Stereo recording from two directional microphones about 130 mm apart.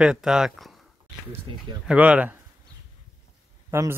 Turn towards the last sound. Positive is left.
turn(degrees=-20)  # may be behind; listen again after turning